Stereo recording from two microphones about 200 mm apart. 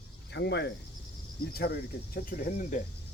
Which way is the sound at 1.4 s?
50° left (ahead or behind).